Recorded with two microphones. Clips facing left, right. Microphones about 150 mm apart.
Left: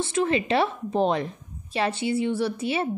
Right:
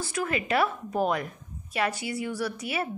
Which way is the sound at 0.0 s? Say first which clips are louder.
Left 6 dB; 25° left (ahead or behind).